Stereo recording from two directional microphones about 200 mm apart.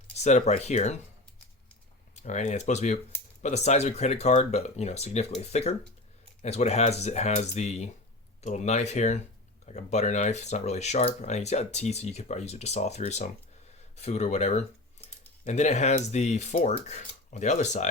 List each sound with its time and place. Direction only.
0.2 s speech: 35° left (ahead or behind)
2.1 s speech: 35° left (ahead or behind)